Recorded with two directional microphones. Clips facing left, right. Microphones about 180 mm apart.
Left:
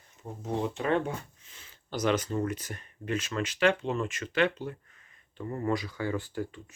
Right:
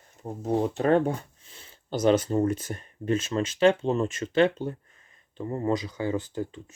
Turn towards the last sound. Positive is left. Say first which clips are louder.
# right 3 dB
turn(degrees=-20)  # may be behind; listen again after turning